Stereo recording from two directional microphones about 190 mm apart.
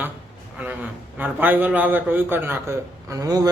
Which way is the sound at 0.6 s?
10° right (ahead or behind).